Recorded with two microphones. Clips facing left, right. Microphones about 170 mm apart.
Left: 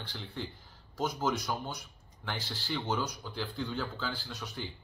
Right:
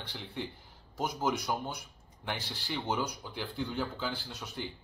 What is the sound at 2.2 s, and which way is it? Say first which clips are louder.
Speech: even; 15° right (ahead or behind).